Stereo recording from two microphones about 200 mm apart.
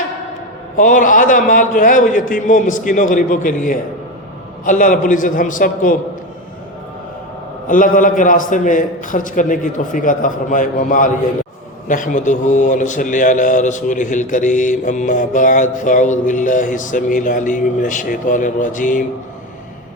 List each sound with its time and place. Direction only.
0.8 s a man's voice: 40° left (ahead or behind)
7.7 s a man's voice: 40° left (ahead or behind)